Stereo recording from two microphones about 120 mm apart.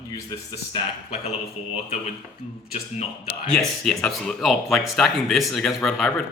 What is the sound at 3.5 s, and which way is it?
Speech, 5° left (ahead or behind).